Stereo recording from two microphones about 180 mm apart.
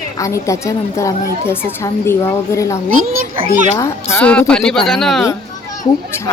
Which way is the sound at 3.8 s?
15° left (ahead or behind).